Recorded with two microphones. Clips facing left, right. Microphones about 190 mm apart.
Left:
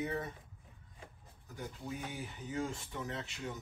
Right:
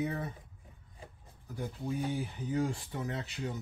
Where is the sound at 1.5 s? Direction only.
35° right (ahead or behind).